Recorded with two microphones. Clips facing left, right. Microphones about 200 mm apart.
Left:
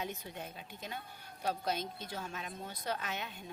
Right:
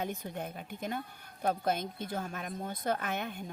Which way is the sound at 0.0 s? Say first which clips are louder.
Right 5 dB; 55° right (ahead or behind).